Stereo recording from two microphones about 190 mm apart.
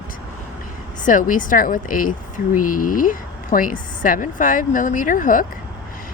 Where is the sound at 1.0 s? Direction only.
45° left (ahead or behind).